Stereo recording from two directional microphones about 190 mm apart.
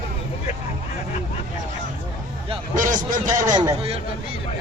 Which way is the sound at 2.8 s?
40° right (ahead or behind).